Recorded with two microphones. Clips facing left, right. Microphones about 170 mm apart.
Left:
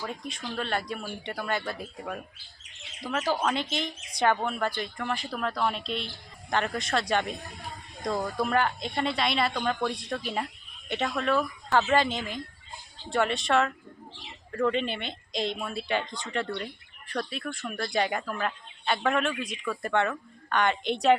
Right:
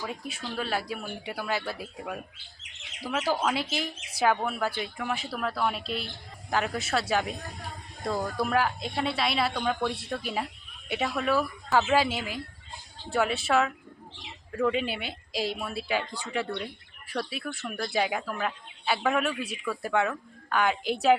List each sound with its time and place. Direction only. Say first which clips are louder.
0.0 s speech: even; 5° right (ahead or behind)